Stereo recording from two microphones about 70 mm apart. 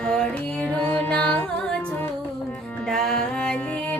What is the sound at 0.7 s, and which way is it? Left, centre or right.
Music, left.